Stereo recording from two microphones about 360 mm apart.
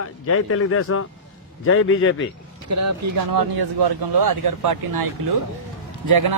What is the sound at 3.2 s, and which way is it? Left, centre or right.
Speech, right.